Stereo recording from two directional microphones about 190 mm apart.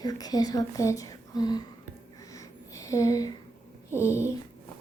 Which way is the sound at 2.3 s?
15° left (ahead or behind).